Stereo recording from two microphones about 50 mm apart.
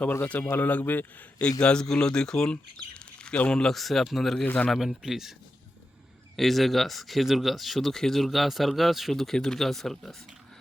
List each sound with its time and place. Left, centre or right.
0.5 s speech: left
1.4 s speech: centre
3.8 s speech: centre
6.3 s speech: centre